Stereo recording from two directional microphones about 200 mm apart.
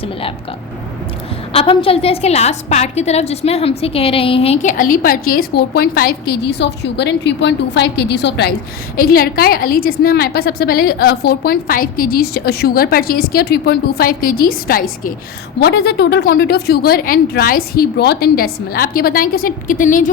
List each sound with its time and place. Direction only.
0.0 s speech: 30° left (ahead or behind)
1.5 s a woman's voice: 25° left (ahead or behind)